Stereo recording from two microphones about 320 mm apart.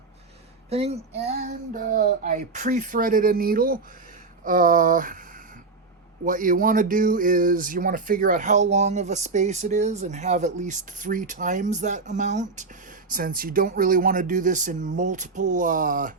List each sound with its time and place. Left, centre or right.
0.7 s speech: centre
6.2 s speech: right